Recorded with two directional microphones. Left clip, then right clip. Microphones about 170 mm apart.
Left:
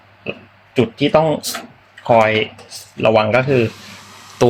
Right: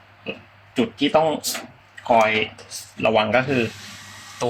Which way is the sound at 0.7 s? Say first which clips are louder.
Left 5 dB; 45° left (ahead or behind).